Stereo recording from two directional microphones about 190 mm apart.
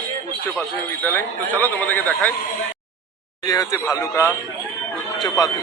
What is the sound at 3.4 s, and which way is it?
Speech, 20° left (ahead or behind).